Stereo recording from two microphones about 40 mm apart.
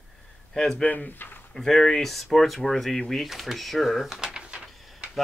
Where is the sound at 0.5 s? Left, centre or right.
Centre.